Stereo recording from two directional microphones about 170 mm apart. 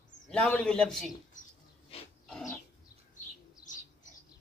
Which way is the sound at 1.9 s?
35° left (ahead or behind).